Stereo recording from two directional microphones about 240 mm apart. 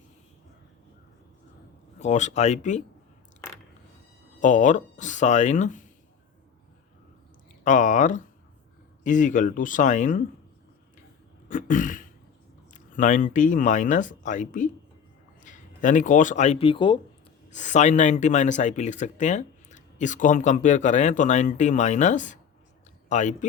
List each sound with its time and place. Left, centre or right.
2.0 s speech: left
4.4 s speech: left
7.6 s speech: left
11.4 s a sound: left
12.7 s speech: left
17.5 s speech: left